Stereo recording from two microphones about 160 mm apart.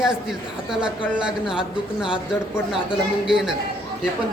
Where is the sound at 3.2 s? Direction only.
5° right (ahead or behind).